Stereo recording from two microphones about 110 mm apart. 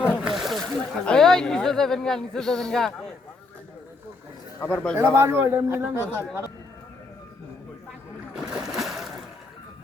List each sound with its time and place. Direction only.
0.0 s speech: 5° right (ahead or behind)
4.6 s speech: 10° left (ahead or behind)
4.9 s a man's voice: 25° right (ahead or behind)
8.4 s splash: 5° right (ahead or behind)
8.7 s a sound: centre (ahead or behind)